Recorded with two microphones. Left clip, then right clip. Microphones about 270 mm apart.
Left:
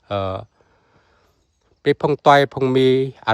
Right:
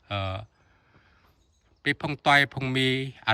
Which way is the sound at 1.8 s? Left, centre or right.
Centre.